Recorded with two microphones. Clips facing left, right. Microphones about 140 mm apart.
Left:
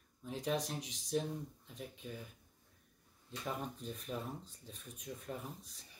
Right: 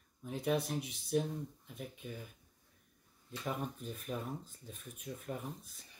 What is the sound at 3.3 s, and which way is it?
Speech, 5° right (ahead or behind).